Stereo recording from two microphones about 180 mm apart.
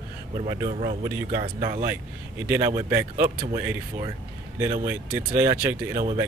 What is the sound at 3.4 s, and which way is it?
Speech, 25° right (ahead or behind).